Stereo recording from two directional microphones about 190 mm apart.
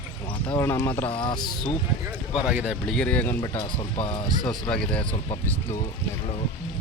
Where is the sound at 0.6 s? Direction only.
10° left (ahead or behind).